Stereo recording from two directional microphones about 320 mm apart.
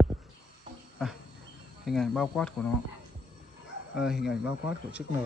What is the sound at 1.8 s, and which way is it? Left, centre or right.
Speech, centre.